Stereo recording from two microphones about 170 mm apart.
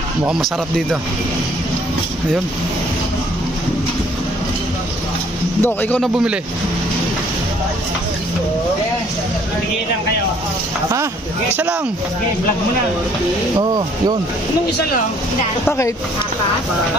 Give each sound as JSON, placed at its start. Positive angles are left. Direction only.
{"t": 0.3, "sound": "speech", "side_deg": 0}
{"t": 5.6, "sound": "speech", "side_deg": 10}
{"t": 13.6, "sound": "speech", "side_deg": -25}